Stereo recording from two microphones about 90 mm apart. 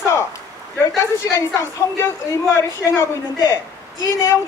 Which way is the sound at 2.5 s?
35° left (ahead or behind).